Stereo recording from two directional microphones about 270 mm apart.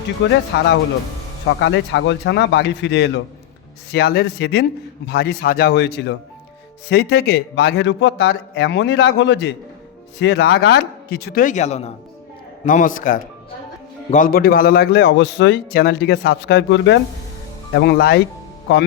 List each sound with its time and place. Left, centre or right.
0.2 s a man's voice: left
1.5 s a man's voice: left